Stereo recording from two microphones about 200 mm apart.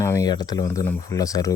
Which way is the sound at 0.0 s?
15° left (ahead or behind).